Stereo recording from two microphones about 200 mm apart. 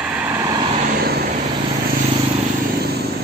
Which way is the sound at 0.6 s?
25° right (ahead or behind).